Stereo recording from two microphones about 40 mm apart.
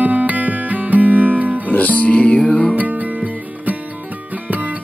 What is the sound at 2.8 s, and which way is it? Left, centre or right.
Music, right.